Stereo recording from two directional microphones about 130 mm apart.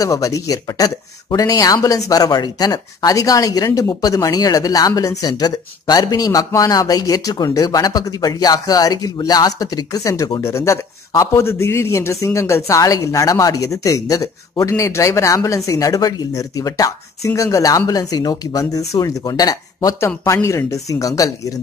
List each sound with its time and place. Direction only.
0.0 s speech: 25° left (ahead or behind)